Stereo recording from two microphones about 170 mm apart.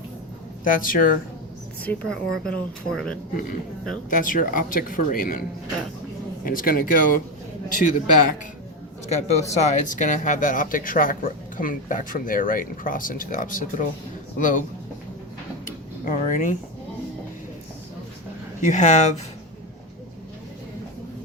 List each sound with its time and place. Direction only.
0.6 s speech: 55° left (ahead or behind)
1.8 s a woman's voice: 5° left (ahead or behind)
4.1 s speech: 55° left (ahead or behind)
6.4 s speech: 55° left (ahead or behind)
9.0 s speech: 40° left (ahead or behind)
15.6 s drawer open or close: 55° left (ahead or behind)
18.6 s speech: 45° left (ahead or behind)